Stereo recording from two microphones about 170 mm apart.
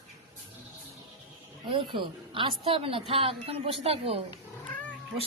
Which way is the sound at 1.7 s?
30° right (ahead or behind).